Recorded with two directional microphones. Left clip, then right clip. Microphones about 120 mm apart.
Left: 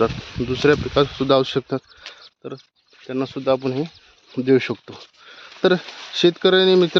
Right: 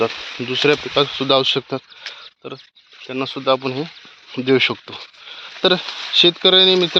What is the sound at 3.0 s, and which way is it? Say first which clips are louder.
Speech: right 2 dB; 90° left.